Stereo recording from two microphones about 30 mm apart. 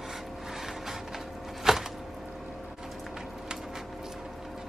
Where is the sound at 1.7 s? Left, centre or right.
Centre.